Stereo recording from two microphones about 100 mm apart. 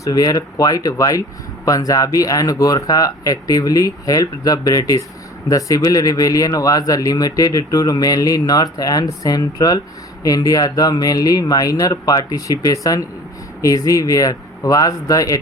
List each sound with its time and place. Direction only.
0.0 s speech: 35° left (ahead or behind)